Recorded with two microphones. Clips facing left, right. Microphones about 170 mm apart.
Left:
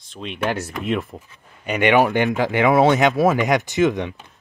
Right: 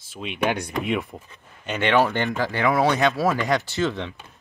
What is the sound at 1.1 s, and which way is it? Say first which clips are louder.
Speech: left 1 dB; 10° left (ahead or behind).